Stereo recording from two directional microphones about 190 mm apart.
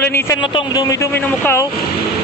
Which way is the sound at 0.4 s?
25° left (ahead or behind).